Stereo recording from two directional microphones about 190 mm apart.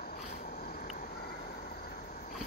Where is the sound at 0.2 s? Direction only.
40° left (ahead or behind).